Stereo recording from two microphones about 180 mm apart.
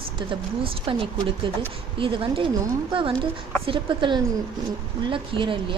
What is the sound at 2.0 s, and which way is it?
A woman's voice, 30° right (ahead or behind).